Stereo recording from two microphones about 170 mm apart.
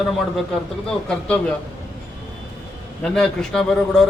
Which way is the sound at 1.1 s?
5° left (ahead or behind).